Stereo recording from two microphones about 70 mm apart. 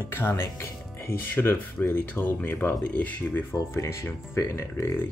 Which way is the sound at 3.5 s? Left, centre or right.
Left.